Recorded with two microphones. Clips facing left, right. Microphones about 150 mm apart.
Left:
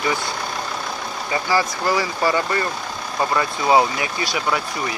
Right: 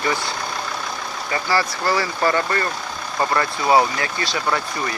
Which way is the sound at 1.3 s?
15° left (ahead or behind).